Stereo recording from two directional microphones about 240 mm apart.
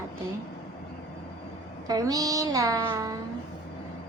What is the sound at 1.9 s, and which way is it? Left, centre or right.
Speech, centre.